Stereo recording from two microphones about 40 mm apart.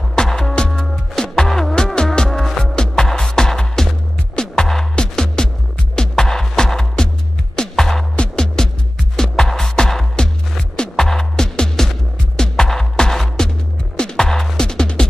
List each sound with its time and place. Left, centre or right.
0.1 s music: centre